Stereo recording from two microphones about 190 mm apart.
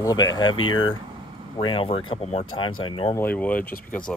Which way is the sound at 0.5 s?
90° left.